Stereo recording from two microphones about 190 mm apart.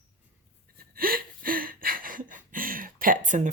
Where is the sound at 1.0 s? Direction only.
50° right (ahead or behind).